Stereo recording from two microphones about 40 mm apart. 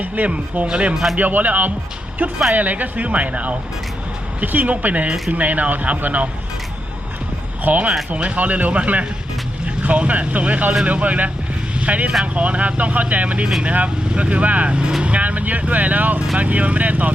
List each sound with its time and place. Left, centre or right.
0.2 s speech: right
0.7 s speech: right
1.1 s speech: right
4.4 s speech: right
7.6 s speech: right